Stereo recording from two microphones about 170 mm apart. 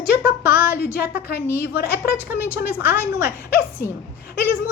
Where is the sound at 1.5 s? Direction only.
65° left (ahead or behind).